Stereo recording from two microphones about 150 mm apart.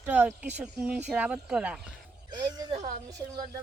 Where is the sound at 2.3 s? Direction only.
30° right (ahead or behind).